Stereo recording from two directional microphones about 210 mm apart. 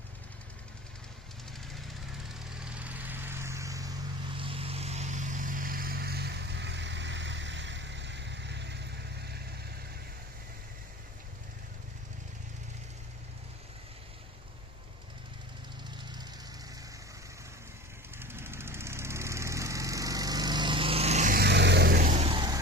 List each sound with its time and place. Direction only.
2.3 s vehicle: 5° right (ahead or behind)
4.4 s vehicle: 25° right (ahead or behind); by 8.8 s 55° right (ahead or behind)
18.2 s lawn mower: 10° right (ahead or behind)